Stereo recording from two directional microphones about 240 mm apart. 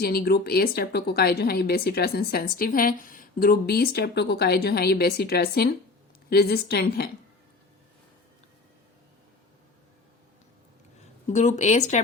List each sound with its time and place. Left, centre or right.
0.0 s speech: left
11.3 s speech: left